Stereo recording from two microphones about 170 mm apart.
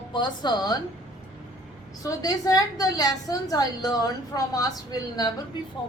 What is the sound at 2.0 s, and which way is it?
A woman's voice, 20° left (ahead or behind).